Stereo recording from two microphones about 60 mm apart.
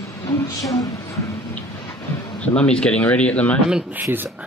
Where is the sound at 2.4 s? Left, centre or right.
Centre.